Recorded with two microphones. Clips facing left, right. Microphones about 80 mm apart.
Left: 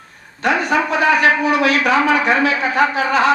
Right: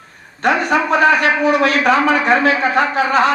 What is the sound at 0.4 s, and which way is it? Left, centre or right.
A man's voice, right.